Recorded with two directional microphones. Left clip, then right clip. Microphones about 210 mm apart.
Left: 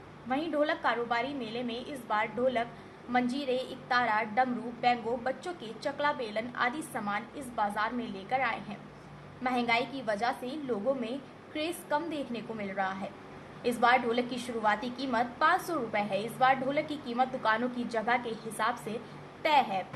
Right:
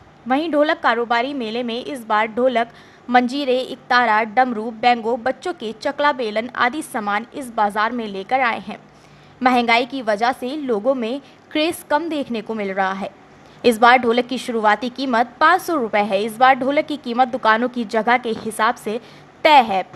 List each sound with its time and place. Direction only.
0.3 s a woman's voice: 50° right (ahead or behind)